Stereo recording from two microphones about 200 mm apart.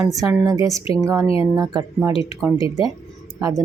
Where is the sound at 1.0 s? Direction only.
15° right (ahead or behind).